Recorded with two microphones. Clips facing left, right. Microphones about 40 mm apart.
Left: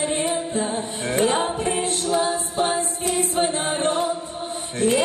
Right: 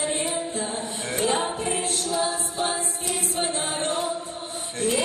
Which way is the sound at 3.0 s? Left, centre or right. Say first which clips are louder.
Left 6 dB; left.